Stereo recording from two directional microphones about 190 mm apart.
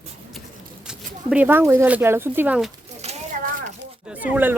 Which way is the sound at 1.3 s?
10° right (ahead or behind).